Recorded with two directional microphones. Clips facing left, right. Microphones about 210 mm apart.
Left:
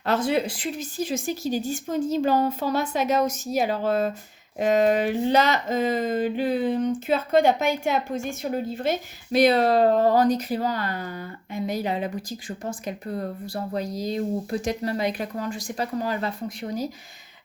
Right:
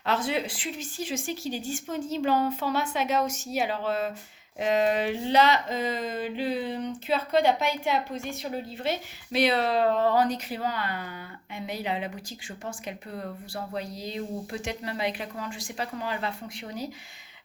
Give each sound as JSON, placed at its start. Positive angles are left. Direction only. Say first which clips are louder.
{"t": 0.0, "sound": "speech", "louder": "left 5 dB", "side_deg": 40}
{"t": 4.6, "sound": "a sound", "louder": "left 4 dB", "side_deg": 45}
{"t": 11.5, "sound": "speech", "louder": "left 5 dB", "side_deg": 40}